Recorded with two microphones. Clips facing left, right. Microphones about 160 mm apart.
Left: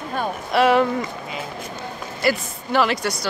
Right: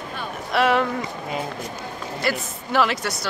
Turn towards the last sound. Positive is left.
turn(degrees=0)  # may be behind; listen again after turning